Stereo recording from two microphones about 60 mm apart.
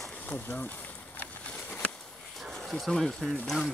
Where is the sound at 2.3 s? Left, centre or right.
Centre.